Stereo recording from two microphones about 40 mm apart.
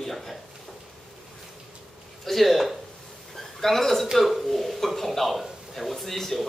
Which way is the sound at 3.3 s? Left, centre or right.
Centre.